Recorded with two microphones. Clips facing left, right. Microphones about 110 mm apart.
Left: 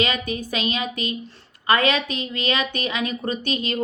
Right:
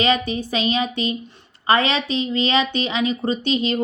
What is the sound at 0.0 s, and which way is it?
Speech, 30° right (ahead or behind).